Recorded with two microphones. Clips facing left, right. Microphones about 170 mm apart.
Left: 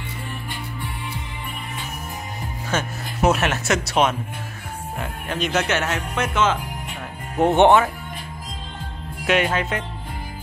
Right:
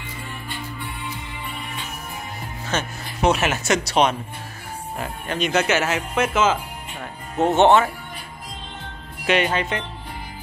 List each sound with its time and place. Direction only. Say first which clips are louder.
2.7 s speech: left 1 dB; 5° left (ahead or behind)
7.3 s speech: left 1 dB; 15° left (ahead or behind)
9.2 s speech: even; 5° left (ahead or behind)